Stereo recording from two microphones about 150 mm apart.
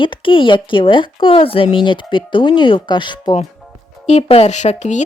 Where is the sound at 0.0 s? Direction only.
35° left (ahead or behind).